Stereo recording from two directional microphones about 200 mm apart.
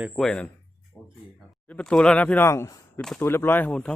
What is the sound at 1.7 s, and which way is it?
Speech, 5° left (ahead or behind).